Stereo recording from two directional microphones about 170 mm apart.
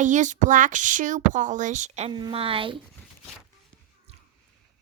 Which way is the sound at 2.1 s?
30° right (ahead or behind).